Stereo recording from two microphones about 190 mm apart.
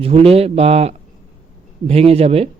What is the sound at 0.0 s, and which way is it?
A man's voice, 30° right (ahead or behind).